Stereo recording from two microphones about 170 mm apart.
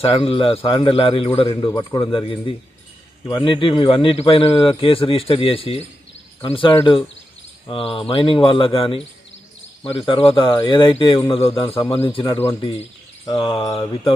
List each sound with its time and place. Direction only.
0.0 s a man's voice: 30° left (ahead or behind)
1.4 s mantra: 25° left (ahead or behind)
2.1 s a man's voice: 30° left (ahead or behind)
6.4 s mantra: 30° left (ahead or behind)
7.7 s a man's voice: 30° left (ahead or behind)
13.2 s mantra: 30° left (ahead or behind)